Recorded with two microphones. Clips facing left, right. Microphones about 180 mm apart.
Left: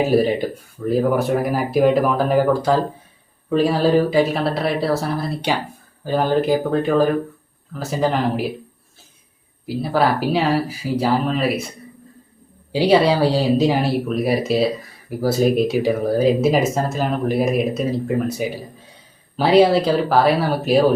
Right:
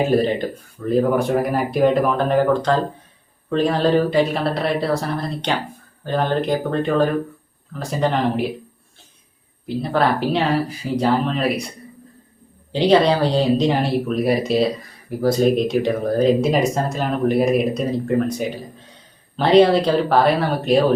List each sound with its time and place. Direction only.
0.1 s speech: 10° left (ahead or behind)
9.6 s speech: 5° left (ahead or behind)
12.7 s speech: 10° left (ahead or behind)